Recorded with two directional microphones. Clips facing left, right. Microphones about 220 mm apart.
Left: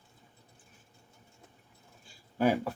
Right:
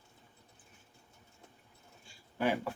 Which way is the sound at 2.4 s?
40° left (ahead or behind).